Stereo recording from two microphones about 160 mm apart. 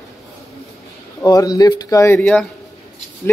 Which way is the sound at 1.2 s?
20° left (ahead or behind).